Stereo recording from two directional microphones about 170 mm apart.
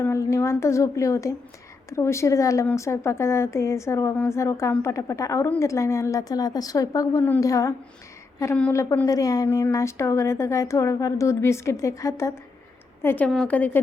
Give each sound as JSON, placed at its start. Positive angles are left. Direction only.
{"t": 0.0, "sound": "a woman's voice", "side_deg": 15}